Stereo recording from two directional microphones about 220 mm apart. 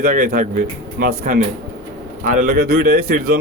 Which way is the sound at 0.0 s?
40° right (ahead or behind).